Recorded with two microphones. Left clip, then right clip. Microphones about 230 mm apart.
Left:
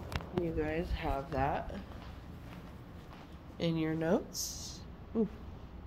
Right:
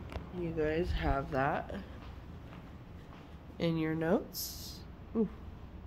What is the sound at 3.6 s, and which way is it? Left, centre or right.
Speech, centre.